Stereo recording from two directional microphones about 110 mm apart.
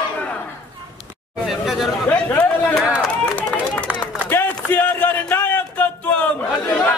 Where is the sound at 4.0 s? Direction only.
20° left (ahead or behind).